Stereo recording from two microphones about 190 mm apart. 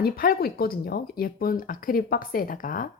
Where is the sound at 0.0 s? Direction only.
50° left (ahead or behind).